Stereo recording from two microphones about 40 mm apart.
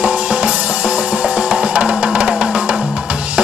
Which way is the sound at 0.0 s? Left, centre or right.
Right.